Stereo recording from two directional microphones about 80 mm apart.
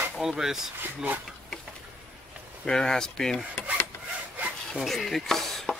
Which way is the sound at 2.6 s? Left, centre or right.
Centre.